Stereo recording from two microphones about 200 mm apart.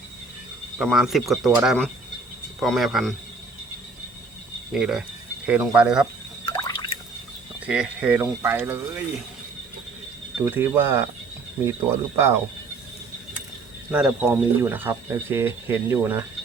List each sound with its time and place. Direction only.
0.8 s speech: centre (ahead or behind)
4.7 s speech: 5° right (ahead or behind)
6.4 s drip: 20° left (ahead or behind)
7.6 s speech: 5° right (ahead or behind)
10.4 s speech: 10° right (ahead or behind)
13.9 s speech: 5° right (ahead or behind)